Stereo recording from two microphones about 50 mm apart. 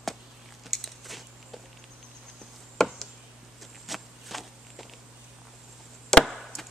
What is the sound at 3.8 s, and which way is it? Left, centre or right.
Walk, centre.